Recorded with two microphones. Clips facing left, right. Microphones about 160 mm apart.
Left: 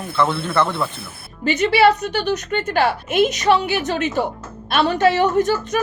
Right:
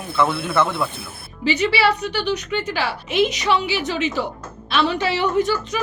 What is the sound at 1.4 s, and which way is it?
A woman's voice, 50° left (ahead or behind).